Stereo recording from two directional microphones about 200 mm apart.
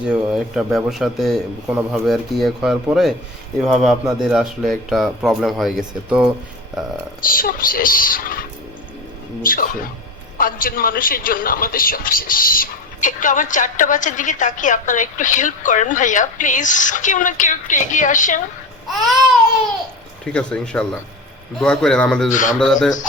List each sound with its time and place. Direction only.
0.0 s speech: 5° right (ahead or behind)
7.2 s a woman's voice: 45° left (ahead or behind)
18.9 s speech: centre (ahead or behind)
22.3 s a man's voice: 40° left (ahead or behind)
22.5 s speech: centre (ahead or behind)